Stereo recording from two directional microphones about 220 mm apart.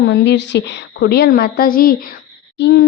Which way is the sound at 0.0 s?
50° left (ahead or behind).